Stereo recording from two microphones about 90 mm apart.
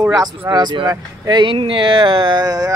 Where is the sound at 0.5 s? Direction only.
55° right (ahead or behind); by 2.4 s 70° right (ahead or behind).